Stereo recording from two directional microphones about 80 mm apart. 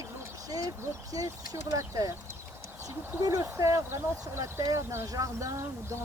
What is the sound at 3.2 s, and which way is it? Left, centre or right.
Speech, right.